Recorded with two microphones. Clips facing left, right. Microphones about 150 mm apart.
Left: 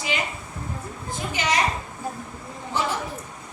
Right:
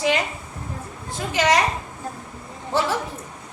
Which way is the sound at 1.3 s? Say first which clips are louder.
Right 7 dB; 90° right.